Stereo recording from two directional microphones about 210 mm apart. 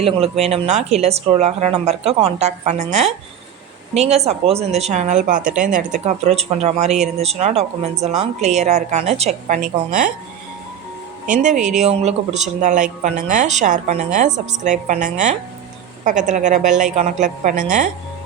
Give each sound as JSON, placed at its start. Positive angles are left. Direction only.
{"t": 0.0, "sound": "speech", "side_deg": -30}
{"t": 11.3, "sound": "speech", "side_deg": -35}